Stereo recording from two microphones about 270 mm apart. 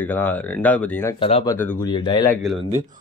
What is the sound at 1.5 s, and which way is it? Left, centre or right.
Speech, centre.